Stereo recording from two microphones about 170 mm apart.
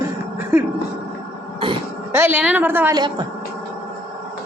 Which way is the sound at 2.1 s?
10° right (ahead or behind).